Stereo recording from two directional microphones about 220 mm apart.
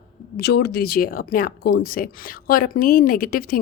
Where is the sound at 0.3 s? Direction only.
45° left (ahead or behind).